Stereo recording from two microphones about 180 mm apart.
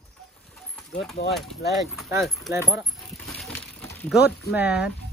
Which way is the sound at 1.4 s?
Centre (ahead or behind).